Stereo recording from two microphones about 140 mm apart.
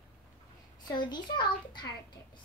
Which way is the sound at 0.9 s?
30° left (ahead or behind).